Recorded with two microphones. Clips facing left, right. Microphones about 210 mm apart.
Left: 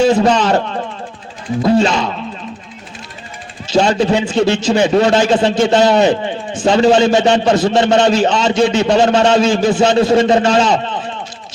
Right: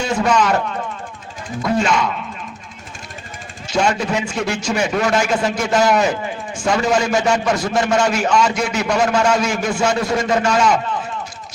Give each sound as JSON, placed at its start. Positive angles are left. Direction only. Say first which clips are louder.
{"t": 0.1, "sound": "a man's voice", "louder": "left 5 dB", "side_deg": 30}
{"t": 3.7, "sound": "a man's voice", "louder": "left 6 dB", "side_deg": 30}